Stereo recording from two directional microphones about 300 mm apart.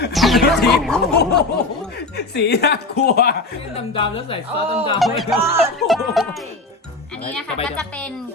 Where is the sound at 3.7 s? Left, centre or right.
Centre.